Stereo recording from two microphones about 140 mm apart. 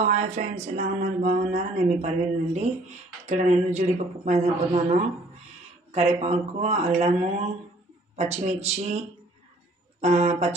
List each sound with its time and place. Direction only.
0.0 s speech: 55° right (ahead or behind)
1.2 s mantra: 85° right
1.5 s speech: 50° right (ahead or behind)